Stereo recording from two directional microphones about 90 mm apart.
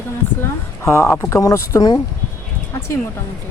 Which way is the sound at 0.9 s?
30° left (ahead or behind).